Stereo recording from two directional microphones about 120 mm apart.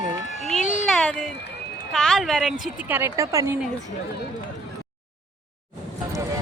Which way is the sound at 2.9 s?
25° right (ahead or behind).